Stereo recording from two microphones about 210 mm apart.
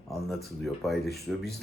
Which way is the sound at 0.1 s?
Centre (ahead or behind).